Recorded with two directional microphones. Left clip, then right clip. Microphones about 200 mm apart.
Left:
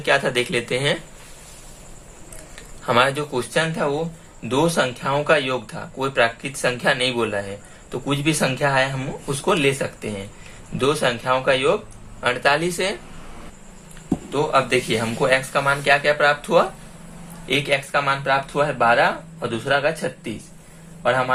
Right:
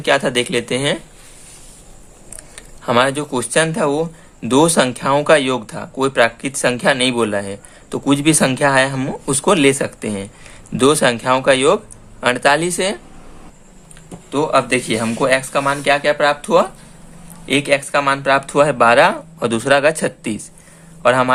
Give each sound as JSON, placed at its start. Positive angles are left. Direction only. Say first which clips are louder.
{"t": 0.0, "sound": "speech", "louder": "right 4 dB", "side_deg": -35}
{"t": 2.6, "sound": "speech", "louder": "right 3 dB", "side_deg": -35}
{"t": 14.3, "sound": "speech", "louder": "right 4 dB", "side_deg": -40}